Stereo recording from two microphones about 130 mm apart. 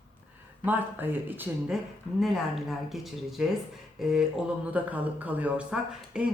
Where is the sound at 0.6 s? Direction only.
15° right (ahead or behind).